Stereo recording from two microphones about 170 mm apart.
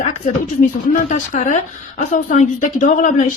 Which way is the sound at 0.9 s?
50° left (ahead or behind).